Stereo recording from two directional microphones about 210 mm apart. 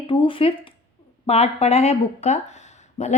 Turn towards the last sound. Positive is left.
turn(degrees=35)  # may be behind; listen again after turning